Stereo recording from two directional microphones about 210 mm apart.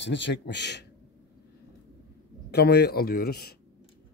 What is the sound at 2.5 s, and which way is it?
A man's voice, 50° left (ahead or behind).